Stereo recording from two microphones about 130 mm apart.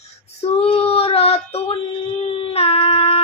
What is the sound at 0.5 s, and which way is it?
Child singing, 50° left (ahead or behind).